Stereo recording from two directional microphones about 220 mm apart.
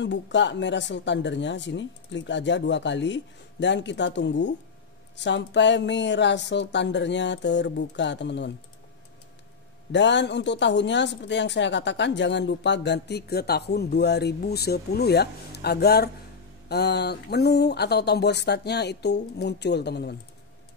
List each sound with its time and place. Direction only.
0.0 s speech: 55° left (ahead or behind)
9.9 s speech: 55° left (ahead or behind)